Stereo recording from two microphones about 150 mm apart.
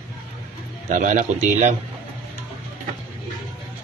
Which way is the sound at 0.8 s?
55° right (ahead or behind).